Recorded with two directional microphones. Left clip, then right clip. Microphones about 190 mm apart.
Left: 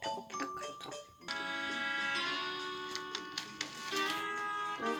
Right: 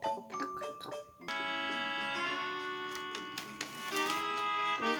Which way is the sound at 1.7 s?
30° right (ahead or behind).